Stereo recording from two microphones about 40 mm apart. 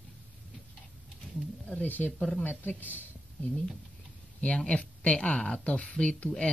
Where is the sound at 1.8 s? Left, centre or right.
Left.